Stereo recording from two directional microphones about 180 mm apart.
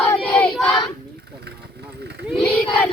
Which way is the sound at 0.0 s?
10° left (ahead or behind).